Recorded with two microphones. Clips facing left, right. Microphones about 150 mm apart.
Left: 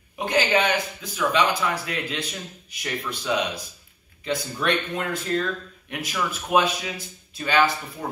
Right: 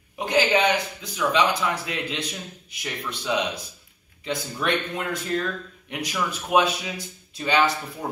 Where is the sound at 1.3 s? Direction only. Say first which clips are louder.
Right 1 dB; 15° right (ahead or behind).